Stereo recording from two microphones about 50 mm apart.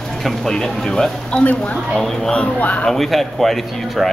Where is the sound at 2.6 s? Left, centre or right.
Left.